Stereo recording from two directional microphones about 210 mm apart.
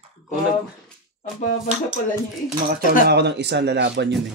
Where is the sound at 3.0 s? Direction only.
50° right (ahead or behind).